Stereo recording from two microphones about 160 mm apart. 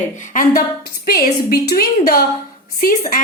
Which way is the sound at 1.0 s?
70° left (ahead or behind).